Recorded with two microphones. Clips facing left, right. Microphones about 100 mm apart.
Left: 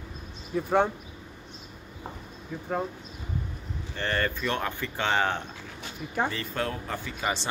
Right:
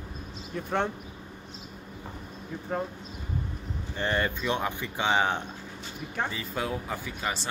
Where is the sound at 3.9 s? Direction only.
15° right (ahead or behind).